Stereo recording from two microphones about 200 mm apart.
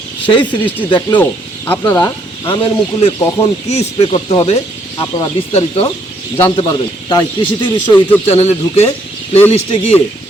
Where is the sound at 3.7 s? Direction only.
30° left (ahead or behind).